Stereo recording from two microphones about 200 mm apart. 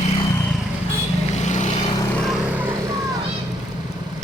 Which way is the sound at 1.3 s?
35° left (ahead or behind).